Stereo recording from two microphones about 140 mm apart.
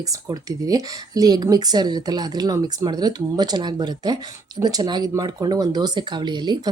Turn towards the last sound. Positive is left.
turn(degrees=-30)  # may be behind; listen again after turning